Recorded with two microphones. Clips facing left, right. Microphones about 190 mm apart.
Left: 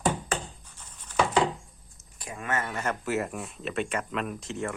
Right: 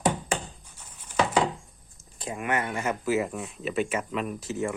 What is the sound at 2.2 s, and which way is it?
Speech, 20° right (ahead or behind).